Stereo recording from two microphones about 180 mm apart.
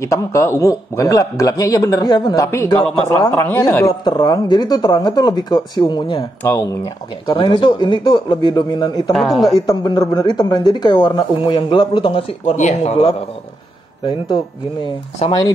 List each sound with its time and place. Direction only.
0.0 s a man's voice: 15° left (ahead or behind)
3.8 s speech: 25° left (ahead or behind)
6.4 s speech: 15° left (ahead or behind)
9.1 s speech: centre (ahead or behind)
9.7 s speech: 20° left (ahead or behind)